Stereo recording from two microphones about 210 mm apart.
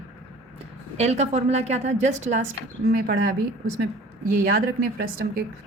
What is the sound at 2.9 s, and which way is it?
Speech, 45° right (ahead or behind).